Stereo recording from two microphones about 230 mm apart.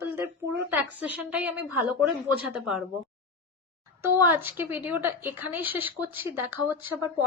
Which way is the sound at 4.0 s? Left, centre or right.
Centre.